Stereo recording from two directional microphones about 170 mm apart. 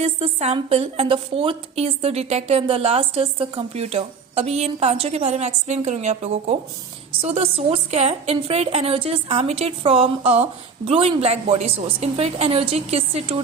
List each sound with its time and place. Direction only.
0.0 s a woman's voice: 40° right (ahead or behind)